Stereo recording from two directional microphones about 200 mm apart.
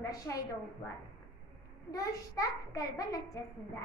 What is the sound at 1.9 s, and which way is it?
A woman's voice, 15° left (ahead or behind).